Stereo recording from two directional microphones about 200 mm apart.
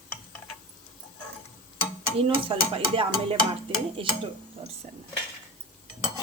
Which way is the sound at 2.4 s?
25° right (ahead or behind).